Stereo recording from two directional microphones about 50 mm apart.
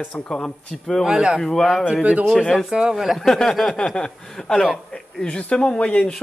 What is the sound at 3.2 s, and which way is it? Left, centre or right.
Speech, centre.